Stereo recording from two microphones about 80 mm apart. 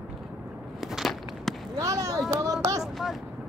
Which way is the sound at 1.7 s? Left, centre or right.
Right.